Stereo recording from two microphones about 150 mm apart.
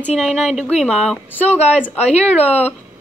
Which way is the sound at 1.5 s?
45° left (ahead or behind).